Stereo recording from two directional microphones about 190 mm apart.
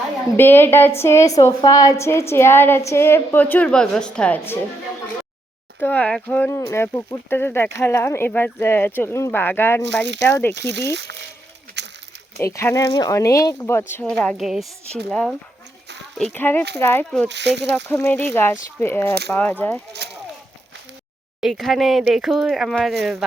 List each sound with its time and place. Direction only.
0.3 s a woman's voice: 10° left (ahead or behind)
5.8 s a woman's voice: 10° left (ahead or behind)
9.8 s speech: 70° right (ahead or behind)
10.2 s a woman's voice: 10° left (ahead or behind)
11.8 s a sound: 65° right (ahead or behind)
12.4 s a woman's voice: 15° left (ahead or behind)
17.2 s speech: 65° right (ahead or behind)
17.8 s a woman's voice: 10° left (ahead or behind)
19.9 s speech: 60° right (ahead or behind)
21.4 s speech: centre (ahead or behind)